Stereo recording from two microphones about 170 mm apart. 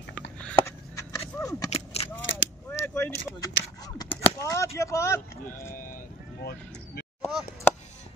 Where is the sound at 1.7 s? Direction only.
35° left (ahead or behind).